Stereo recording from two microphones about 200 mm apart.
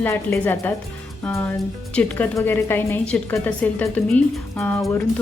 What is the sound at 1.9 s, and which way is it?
A woman's voice, 10° left (ahead or behind).